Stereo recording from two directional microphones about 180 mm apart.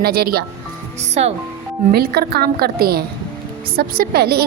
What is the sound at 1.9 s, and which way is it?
A woman's voice, 60° right (ahead or behind).